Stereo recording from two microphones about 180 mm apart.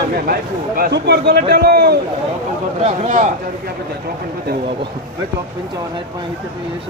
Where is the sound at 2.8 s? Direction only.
40° right (ahead or behind).